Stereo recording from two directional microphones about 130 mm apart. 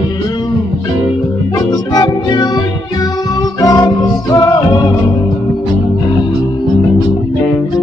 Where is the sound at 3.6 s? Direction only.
30° left (ahead or behind).